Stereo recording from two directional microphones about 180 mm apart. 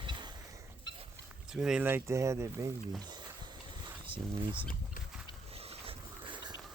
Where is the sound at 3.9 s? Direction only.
25° right (ahead or behind).